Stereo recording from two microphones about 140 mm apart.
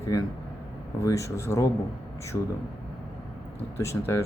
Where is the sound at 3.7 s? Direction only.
20° left (ahead or behind).